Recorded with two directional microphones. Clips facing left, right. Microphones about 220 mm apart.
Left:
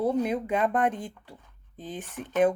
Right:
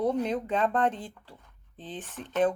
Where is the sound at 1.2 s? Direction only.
10° left (ahead or behind).